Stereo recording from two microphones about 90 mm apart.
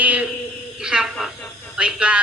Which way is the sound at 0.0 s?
15° right (ahead or behind).